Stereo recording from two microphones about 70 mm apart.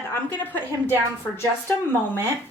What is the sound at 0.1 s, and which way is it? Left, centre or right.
Speech, left.